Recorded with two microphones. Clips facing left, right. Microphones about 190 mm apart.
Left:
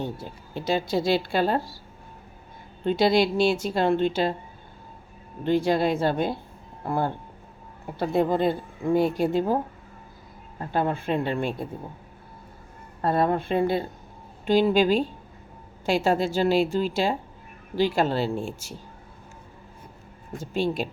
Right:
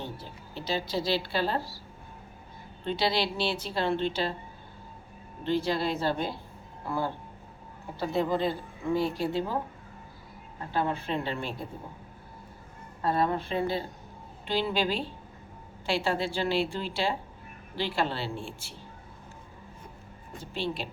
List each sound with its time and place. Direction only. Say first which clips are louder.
0.0 s speech: left 7 dB; 50° left (ahead or behind)
2.8 s speech: left 8 dB; 45° left (ahead or behind)
5.4 s speech: left 6 dB; 50° left (ahead or behind)
10.7 s speech: left 5 dB; 50° left (ahead or behind)
13.0 s speech: left 4 dB; 55° left (ahead or behind)
20.4 s speech: left 7 dB; 45° left (ahead or behind)